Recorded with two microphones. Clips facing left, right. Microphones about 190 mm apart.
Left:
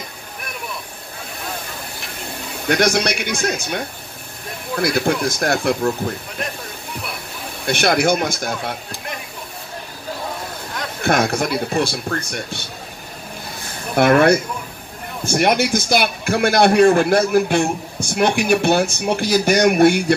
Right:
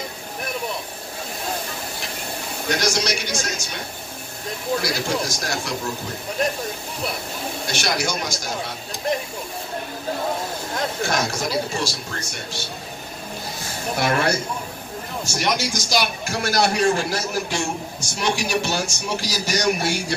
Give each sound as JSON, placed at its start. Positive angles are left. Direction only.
{"t": 2.7, "sound": "a man's voice", "side_deg": 60}
{"t": 4.8, "sound": "a man's voice", "side_deg": 55}
{"t": 7.6, "sound": "a man's voice", "side_deg": 55}
{"t": 11.0, "sound": "a man's voice", "side_deg": 60}
{"t": 13.9, "sound": "a man's voice", "side_deg": 55}